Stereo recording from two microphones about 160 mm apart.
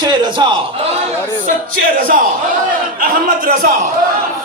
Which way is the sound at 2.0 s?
60° right (ahead or behind).